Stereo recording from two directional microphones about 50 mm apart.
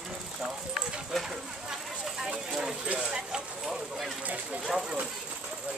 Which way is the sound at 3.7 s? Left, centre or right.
Centre.